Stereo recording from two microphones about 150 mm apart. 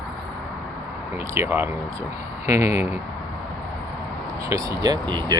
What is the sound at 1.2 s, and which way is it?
Speech, 20° right (ahead or behind).